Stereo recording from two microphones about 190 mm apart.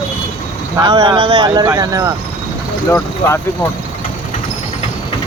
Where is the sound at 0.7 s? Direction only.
25° right (ahead or behind).